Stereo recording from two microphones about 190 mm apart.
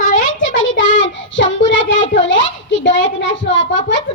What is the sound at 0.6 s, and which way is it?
Child singing, 80° left.